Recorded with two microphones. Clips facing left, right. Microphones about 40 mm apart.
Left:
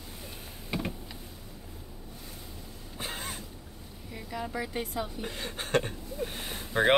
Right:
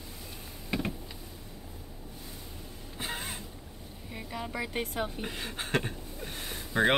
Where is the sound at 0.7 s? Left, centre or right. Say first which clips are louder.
Right 1 dB; centre.